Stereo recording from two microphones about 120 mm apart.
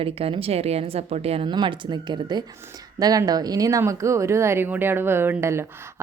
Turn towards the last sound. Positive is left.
turn(degrees=-20)  # may be behind; listen again after turning